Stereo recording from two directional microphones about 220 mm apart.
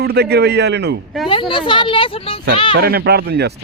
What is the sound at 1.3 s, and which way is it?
Speech, 25° left (ahead or behind).